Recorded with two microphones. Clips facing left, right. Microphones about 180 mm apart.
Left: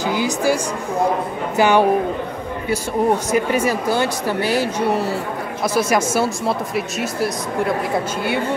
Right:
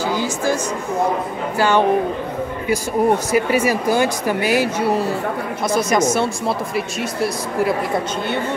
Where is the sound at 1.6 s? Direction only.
15° left (ahead or behind).